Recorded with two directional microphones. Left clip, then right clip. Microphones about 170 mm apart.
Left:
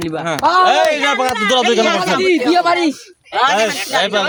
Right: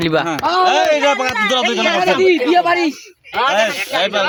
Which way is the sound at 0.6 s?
55° left (ahead or behind).